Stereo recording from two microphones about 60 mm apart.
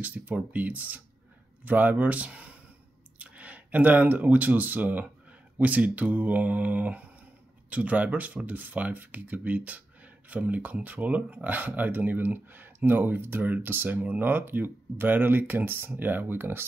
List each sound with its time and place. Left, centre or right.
0.0 s speech: right